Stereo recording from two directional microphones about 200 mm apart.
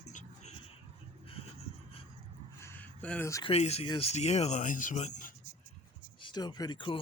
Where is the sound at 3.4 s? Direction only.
30° left (ahead or behind).